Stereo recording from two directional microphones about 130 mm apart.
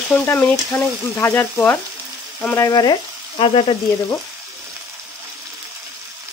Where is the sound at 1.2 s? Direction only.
25° left (ahead or behind).